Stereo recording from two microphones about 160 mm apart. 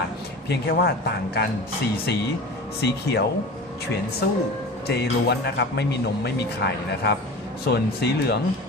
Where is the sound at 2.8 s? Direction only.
90° left.